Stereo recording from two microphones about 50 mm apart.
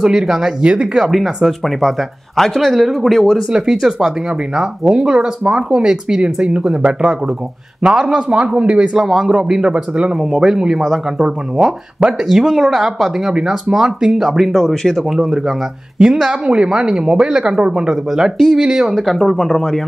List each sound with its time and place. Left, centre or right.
0.0 s speech: centre
1.0 s speech: centre
3.4 s speech: centre
9.0 s speech: centre
9.3 s speech: centre
10.2 s speech: centre
16.0 s speech: centre
19.1 s speech: centre